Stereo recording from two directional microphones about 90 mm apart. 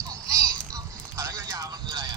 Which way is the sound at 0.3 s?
35° right (ahead or behind).